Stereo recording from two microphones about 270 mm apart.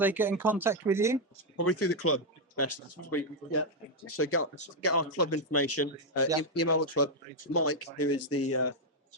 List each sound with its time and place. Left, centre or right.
0.0 s speech: centre
1.5 s speech: left